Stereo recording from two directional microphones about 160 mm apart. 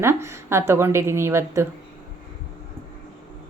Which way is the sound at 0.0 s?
15° right (ahead or behind).